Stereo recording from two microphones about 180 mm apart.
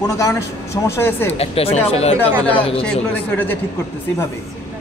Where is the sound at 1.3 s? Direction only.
35° left (ahead or behind).